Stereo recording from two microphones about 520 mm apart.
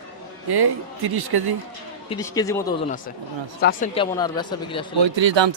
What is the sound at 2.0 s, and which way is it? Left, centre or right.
Speech, centre.